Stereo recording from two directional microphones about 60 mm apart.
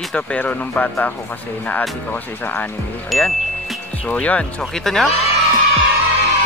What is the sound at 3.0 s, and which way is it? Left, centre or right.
Speech, centre.